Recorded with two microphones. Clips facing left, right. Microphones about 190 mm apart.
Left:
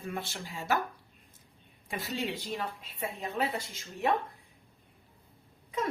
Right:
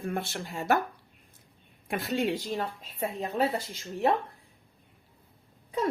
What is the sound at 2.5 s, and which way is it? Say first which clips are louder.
Speech: right 4 dB; 40° right (ahead or behind).